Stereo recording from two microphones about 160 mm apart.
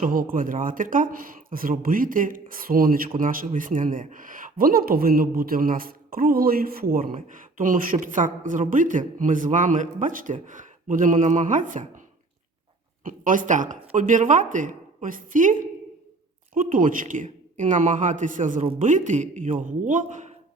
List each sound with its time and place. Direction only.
0.0 s a man's voice: 60° right (ahead or behind)
13.1 s speech: 55° right (ahead or behind)
16.6 s speech: 60° right (ahead or behind)